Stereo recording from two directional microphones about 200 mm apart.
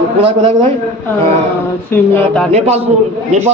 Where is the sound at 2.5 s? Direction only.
35° right (ahead or behind).